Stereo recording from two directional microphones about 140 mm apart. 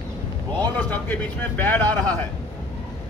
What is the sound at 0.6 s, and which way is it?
Speech, 10° left (ahead or behind).